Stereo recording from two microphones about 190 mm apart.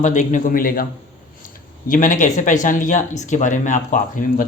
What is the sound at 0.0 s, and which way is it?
Speech, 40° left (ahead or behind).